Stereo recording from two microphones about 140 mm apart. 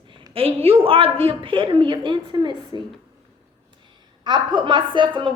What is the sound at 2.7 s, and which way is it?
Speech, 30° left (ahead or behind).